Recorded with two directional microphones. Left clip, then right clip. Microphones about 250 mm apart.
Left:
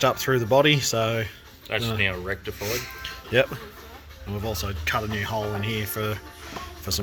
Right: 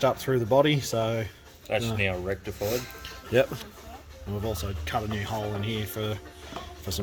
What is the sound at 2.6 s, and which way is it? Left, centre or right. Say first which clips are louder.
Speech: even; centre.